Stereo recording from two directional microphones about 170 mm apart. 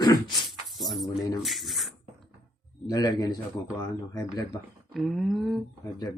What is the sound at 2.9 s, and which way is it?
Speech, 20° left (ahead or behind).